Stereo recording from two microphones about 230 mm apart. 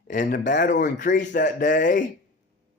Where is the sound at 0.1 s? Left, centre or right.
Left.